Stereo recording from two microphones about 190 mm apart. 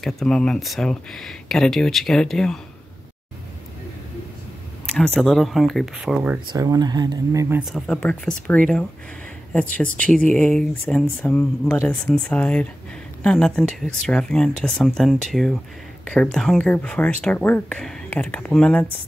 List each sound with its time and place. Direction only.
0.0 s speech: 5° left (ahead or behind)
4.8 s speech: 5° left (ahead or behind)
6.5 s speech: 20° right (ahead or behind)
7.6 s speech: centre (ahead or behind)